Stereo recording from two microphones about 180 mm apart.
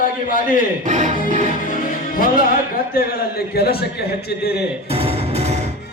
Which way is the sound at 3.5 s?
60° left (ahead or behind).